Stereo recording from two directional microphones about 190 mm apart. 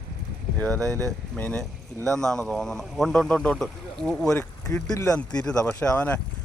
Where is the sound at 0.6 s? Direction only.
10° left (ahead or behind).